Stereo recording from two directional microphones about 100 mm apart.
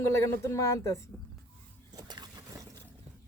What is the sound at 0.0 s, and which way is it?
Speech, 30° left (ahead or behind).